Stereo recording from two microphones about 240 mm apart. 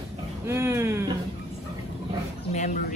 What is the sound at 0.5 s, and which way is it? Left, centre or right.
Speech, centre.